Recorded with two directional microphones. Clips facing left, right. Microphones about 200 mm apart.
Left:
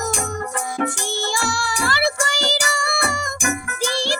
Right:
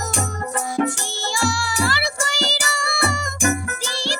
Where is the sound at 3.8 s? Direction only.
50° left (ahead or behind).